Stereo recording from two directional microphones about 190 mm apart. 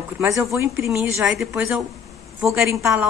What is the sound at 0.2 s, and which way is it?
Speech, 15° right (ahead or behind).